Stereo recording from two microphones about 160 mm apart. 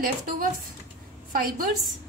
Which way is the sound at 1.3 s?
65° right (ahead or behind).